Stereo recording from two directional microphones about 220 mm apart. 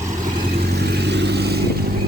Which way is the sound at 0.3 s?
45° right (ahead or behind).